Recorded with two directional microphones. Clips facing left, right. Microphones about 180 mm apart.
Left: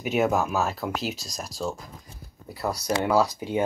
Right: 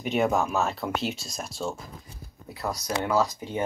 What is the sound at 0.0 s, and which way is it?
Speech, 5° left (ahead or behind).